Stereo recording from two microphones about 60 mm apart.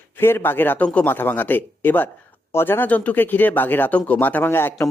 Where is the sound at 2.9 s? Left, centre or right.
Left.